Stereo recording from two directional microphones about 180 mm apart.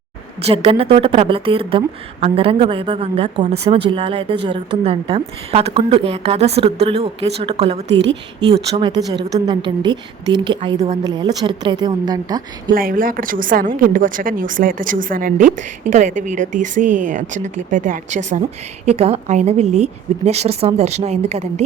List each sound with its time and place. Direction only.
0.4 s speech: 35° right (ahead or behind)
7.9 s a woman's voice: 80° right
8.4 s speech: 30° right (ahead or behind)
8.9 s a woman's voice: 20° right (ahead or behind)
12.7 s speech: 50° right (ahead or behind); by 21.6 s 35° right (ahead or behind)